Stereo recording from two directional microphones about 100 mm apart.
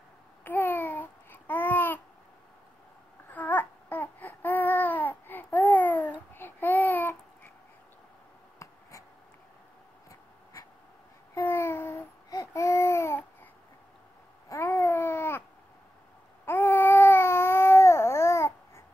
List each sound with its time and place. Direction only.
0.4 s babbling: 20° left (ahead or behind)
3.3 s babbling: 15° left (ahead or behind)
11.3 s babbling: 25° left (ahead or behind)
12.3 s baby cry: 30° left (ahead or behind)
14.5 s a sound: 25° left (ahead or behind)
16.4 s a sound: 20° left (ahead or behind)